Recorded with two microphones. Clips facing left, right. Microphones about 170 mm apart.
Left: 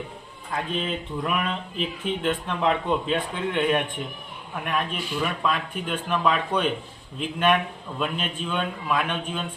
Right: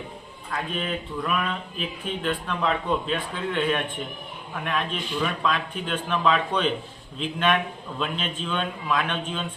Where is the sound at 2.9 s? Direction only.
20° left (ahead or behind).